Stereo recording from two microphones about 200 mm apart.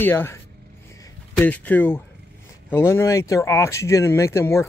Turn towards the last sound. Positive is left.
turn(degrees=15)  # may be behind; listen again after turning